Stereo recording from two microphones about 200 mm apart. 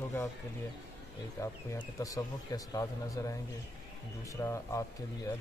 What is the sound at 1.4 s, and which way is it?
Speech, 15° left (ahead or behind).